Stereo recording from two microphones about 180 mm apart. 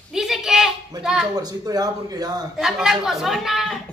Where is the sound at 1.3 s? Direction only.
20° right (ahead or behind).